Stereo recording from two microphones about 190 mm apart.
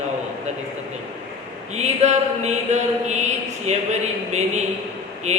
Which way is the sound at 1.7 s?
35° right (ahead or behind).